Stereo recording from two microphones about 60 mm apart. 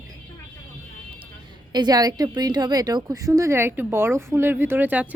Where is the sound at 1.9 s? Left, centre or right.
Right.